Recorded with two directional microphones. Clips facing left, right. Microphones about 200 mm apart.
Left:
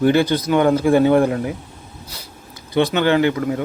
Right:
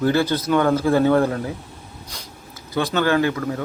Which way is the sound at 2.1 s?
5° left (ahead or behind).